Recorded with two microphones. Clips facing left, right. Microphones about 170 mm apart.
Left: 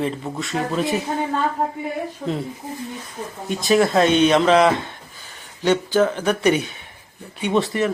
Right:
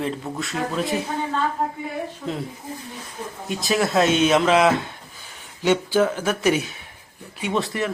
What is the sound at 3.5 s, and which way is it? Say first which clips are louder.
Speech: left 5 dB; centre (ahead or behind).